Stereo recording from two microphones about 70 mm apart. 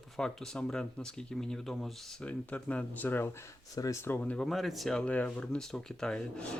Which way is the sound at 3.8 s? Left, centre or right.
Left.